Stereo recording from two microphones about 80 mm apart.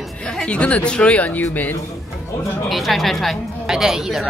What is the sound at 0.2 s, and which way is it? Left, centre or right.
Speech, centre.